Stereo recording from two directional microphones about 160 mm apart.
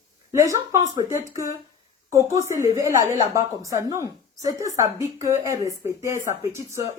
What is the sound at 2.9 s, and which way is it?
Speech, 55° left (ahead or behind).